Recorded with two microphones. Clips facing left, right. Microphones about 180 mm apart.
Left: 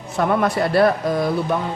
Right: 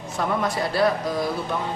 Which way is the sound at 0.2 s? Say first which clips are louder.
Left 6 dB; 60° left (ahead or behind).